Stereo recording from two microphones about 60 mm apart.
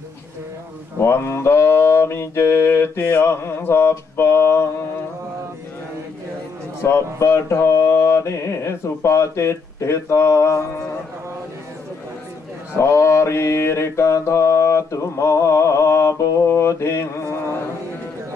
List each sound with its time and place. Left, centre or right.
0.9 s mantra: left
6.8 s mantra: left
12.7 s mantra: left